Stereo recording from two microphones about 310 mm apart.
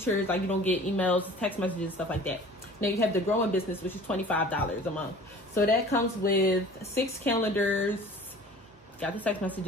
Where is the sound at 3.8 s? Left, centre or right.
Centre.